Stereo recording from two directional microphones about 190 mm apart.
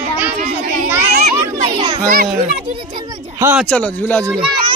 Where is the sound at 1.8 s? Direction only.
25° right (ahead or behind).